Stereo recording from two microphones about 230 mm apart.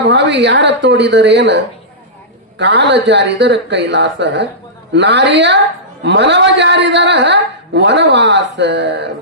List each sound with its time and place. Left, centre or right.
0.0 s a man's voice: right